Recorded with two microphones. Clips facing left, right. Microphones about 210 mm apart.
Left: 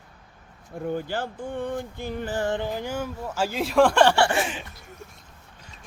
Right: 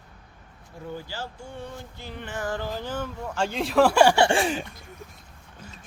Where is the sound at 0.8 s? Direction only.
55° left (ahead or behind); by 4.1 s 10° right (ahead or behind).